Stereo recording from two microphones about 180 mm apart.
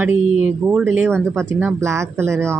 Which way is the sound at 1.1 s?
5° left (ahead or behind).